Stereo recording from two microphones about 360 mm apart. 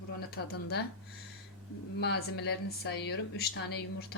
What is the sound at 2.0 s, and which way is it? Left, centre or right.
Speech, left.